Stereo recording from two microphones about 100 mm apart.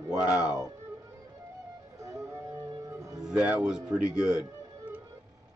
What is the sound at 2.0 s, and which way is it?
Music, 30° right (ahead or behind).